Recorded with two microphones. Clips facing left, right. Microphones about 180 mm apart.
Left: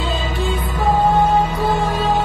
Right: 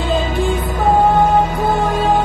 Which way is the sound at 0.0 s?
50° right (ahead or behind).